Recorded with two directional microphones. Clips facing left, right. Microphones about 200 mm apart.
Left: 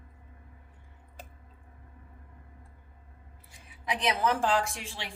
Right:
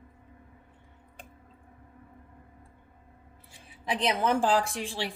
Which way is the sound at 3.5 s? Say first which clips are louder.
Right 2 dB; 30° right (ahead or behind).